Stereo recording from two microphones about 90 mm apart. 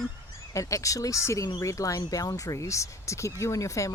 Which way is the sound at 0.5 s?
35° left (ahead or behind).